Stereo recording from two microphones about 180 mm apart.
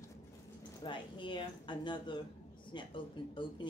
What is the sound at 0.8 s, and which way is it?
Speech, 25° left (ahead or behind).